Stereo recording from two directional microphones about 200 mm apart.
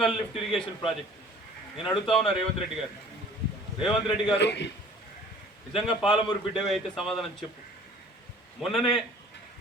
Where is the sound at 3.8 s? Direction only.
Centre (ahead or behind).